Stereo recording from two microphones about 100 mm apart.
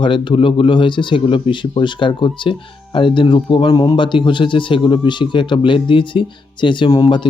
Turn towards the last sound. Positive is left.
turn(degrees=50)  # may be behind; listen again after turning